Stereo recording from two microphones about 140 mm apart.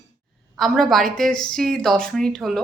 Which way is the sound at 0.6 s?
Centre (ahead or behind).